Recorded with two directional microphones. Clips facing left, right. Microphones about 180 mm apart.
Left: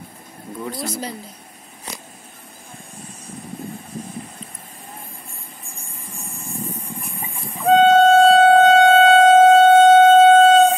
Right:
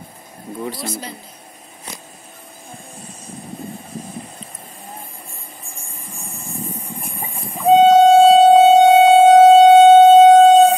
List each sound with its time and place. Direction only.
7.6 s train: 15° right (ahead or behind)